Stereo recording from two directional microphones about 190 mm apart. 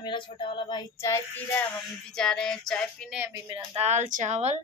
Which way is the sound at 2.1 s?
5° left (ahead or behind).